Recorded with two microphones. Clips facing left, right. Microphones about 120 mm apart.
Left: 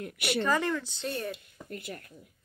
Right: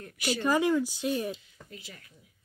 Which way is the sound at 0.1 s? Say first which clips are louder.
Right 3 dB; 65° left (ahead or behind).